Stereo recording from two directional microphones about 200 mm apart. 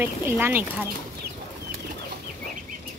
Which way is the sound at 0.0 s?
10° right (ahead or behind).